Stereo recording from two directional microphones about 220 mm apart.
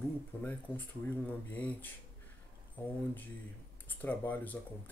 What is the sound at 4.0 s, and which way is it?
Speech, 5° left (ahead or behind).